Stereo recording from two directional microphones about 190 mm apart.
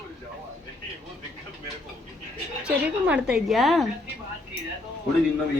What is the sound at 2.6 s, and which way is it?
A woman's voice, 5° right (ahead or behind).